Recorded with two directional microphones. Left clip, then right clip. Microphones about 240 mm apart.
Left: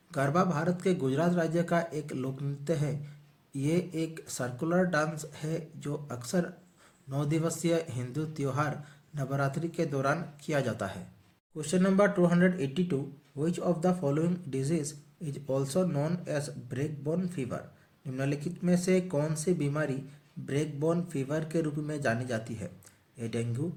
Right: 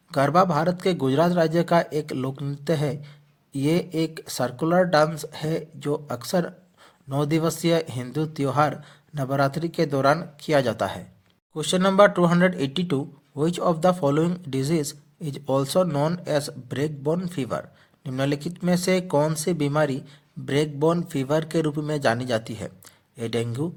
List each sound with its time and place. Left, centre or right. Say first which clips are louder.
0.1 s speech: right 10 dB; right